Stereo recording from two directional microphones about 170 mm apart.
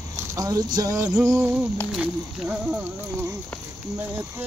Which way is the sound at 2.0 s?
5° right (ahead or behind).